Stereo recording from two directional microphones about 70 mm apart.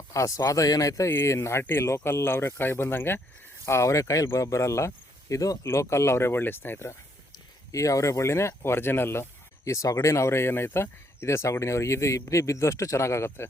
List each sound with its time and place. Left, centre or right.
0.1 s speech: left
3.7 s speech: left
5.6 s speech: left
7.7 s speech: left
9.6 s speech: left